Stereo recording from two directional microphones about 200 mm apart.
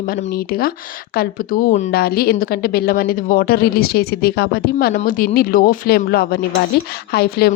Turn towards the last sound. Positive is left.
turn(degrees=50)  # may be behind; listen again after turning